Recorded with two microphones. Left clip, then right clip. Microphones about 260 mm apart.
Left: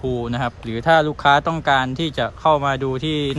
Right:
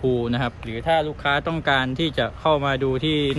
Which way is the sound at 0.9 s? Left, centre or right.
Left.